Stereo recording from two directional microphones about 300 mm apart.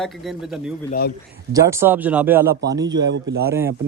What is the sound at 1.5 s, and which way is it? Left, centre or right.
Speech, centre.